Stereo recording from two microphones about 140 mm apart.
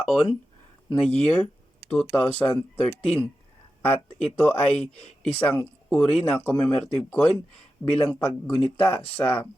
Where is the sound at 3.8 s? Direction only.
10° left (ahead or behind).